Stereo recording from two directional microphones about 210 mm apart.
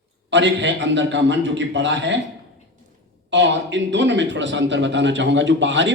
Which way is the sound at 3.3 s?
60° right (ahead or behind).